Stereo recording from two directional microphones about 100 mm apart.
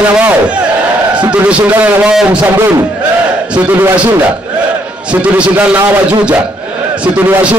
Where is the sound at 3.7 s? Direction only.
20° right (ahead or behind).